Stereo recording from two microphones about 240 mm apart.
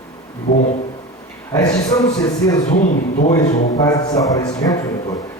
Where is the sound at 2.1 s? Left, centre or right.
Centre.